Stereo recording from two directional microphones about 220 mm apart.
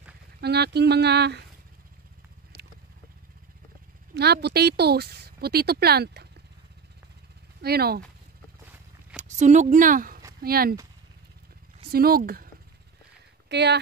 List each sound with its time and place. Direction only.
0.4 s speech: 50° right (ahead or behind)
4.1 s speech: 50° right (ahead or behind)
7.6 s speech: 45° right (ahead or behind)
9.1 s speech: 35° right (ahead or behind)
11.9 s speech: 40° right (ahead or behind)
13.5 s speech: 50° right (ahead or behind)